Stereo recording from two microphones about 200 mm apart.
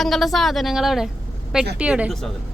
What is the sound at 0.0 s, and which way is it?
Speech, centre (ahead or behind).